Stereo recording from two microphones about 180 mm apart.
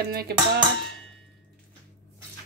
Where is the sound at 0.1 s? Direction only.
60° right (ahead or behind).